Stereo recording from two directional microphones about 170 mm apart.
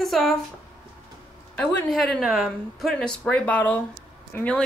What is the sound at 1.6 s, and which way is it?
Speech, 5° left (ahead or behind).